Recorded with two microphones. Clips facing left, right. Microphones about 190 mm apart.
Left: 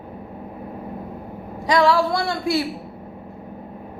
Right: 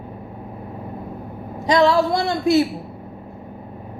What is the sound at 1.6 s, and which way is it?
A woman's voice, 20° right (ahead or behind).